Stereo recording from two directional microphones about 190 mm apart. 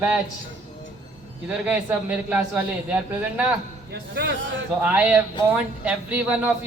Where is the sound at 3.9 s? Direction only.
65° right (ahead or behind).